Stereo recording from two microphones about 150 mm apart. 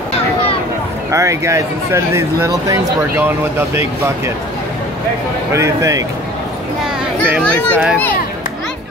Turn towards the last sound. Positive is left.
turn(degrees=-5)  # may be behind; listen again after turning